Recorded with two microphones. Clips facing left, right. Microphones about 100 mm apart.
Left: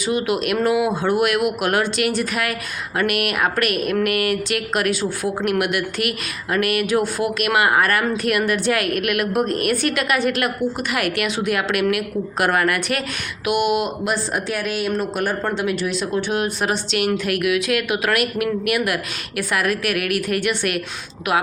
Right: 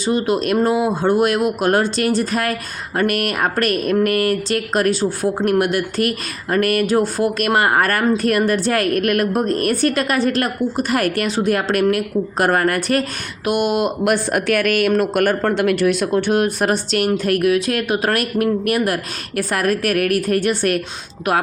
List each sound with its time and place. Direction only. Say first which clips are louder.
0.0 s speech: right 3 dB; 35° right (ahead or behind)